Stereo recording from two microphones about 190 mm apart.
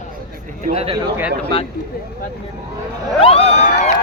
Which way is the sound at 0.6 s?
30° right (ahead or behind).